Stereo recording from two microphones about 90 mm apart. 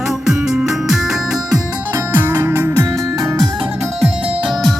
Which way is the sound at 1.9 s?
25° right (ahead or behind).